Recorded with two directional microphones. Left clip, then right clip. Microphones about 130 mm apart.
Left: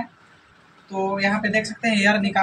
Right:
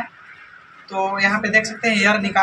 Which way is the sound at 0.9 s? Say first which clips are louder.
Right 4 dB; 15° left (ahead or behind).